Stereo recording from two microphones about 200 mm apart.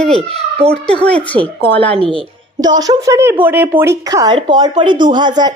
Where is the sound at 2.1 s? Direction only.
20° right (ahead or behind).